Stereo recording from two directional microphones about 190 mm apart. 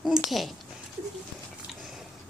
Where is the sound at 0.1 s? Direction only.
Centre (ahead or behind).